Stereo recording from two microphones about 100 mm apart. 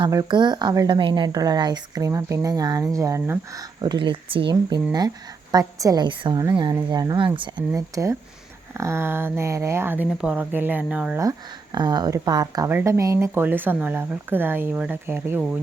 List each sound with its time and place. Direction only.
0.3 s speech: 50° right (ahead or behind)
2.0 s speech: 35° right (ahead or behind)
3.8 s speech: 50° right (ahead or behind)
4.9 s speech: 40° right (ahead or behind)
6.1 s speech: 55° right (ahead or behind)
6.9 s speech: 40° right (ahead or behind)
7.2 s speech: 55° right (ahead or behind)
7.8 s speech: 35° right (ahead or behind); by 11.2 s 10° right (ahead or behind)
11.2 s speech: 40° right (ahead or behind)
12.6 s speech: 25° right (ahead or behind)